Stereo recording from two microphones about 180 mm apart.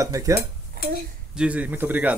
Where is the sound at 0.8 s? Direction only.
55° right (ahead or behind).